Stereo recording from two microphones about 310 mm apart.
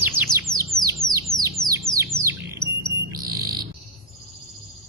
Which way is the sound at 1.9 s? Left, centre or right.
Centre.